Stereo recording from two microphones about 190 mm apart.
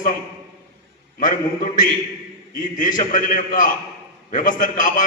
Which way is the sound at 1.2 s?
45° left (ahead or behind).